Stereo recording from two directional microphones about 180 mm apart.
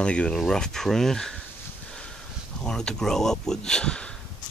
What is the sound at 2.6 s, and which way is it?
Speech, 5° left (ahead or behind).